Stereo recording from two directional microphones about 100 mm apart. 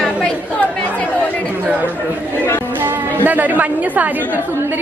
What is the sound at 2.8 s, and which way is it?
A woman's voice, 15° right (ahead or behind).